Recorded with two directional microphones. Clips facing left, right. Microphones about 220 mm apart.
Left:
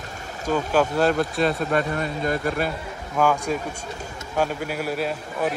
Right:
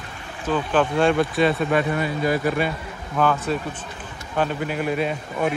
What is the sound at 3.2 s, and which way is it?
Speech, 10° left (ahead or behind).